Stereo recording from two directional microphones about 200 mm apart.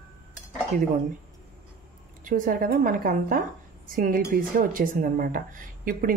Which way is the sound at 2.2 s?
45° right (ahead or behind).